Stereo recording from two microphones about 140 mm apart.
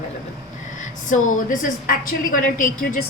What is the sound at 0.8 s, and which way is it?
A woman's voice, 70° left (ahead or behind).